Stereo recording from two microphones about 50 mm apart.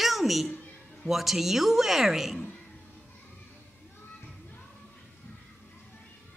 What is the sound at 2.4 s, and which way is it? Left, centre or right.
Music, left.